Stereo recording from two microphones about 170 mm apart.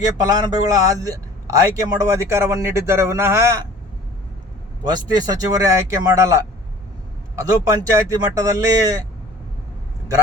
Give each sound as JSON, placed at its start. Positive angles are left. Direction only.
{"t": 0.3, "sound": "a man's voice", "side_deg": -20}
{"t": 4.8, "sound": "a man's voice", "side_deg": -25}